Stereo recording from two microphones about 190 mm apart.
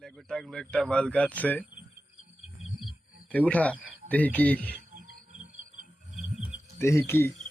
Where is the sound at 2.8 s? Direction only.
5° left (ahead or behind).